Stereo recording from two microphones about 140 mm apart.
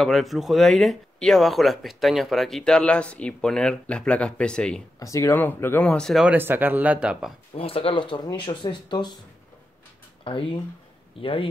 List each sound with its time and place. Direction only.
0.0 s speech: centre (ahead or behind)
4.9 s speech: 20° left (ahead or behind); by 6.2 s 5° left (ahead or behind)
6.2 s speech: 15° right (ahead or behind)
7.5 s speech: 40° left (ahead or behind)
10.2 s speech: 40° left (ahead or behind)